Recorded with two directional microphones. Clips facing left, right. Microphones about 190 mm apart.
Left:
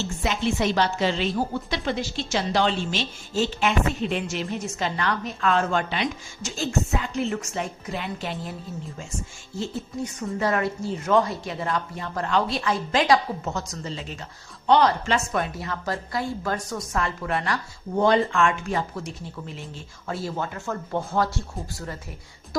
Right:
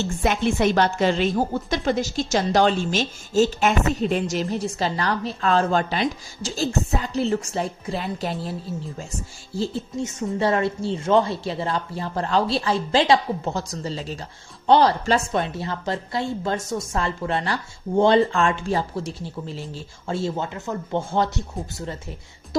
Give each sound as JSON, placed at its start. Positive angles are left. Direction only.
{"t": 0.0, "sound": "a woman's voice", "side_deg": -55}
{"t": 9.6, "sound": "speech", "side_deg": -25}